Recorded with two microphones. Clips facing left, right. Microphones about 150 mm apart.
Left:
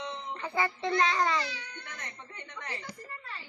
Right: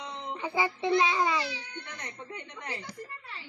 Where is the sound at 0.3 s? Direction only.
15° right (ahead or behind).